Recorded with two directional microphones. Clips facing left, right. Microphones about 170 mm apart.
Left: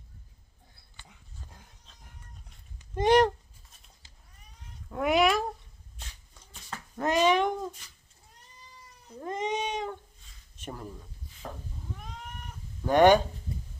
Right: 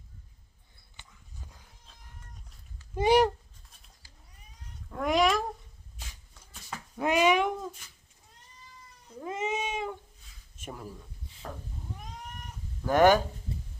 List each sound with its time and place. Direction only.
2.9 s a sound: 5° right (ahead or behind)
4.0 s cat: 20° left (ahead or behind)
4.9 s cat: 5° left (ahead or behind)
6.0 s a sound: 5° right (ahead or behind)
9.2 s cat: 5° right (ahead or behind)
10.6 s speech: 5° right (ahead or behind)
11.4 s cat: 10° left (ahead or behind)
12.9 s speech: 5° right (ahead or behind)